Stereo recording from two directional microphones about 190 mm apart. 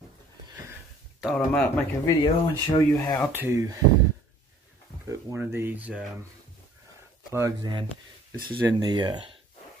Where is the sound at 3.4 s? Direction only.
15° right (ahead or behind).